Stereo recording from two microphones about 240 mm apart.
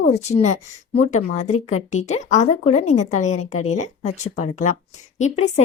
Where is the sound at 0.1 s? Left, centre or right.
Left.